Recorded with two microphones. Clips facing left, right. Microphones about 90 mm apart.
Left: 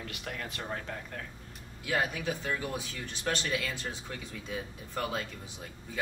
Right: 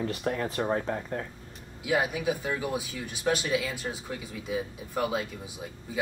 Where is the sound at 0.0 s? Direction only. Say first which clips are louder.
Right 10 dB; 30° right (ahead or behind).